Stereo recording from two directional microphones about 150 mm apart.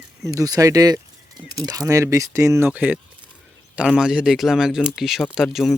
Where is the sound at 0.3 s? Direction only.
25° right (ahead or behind).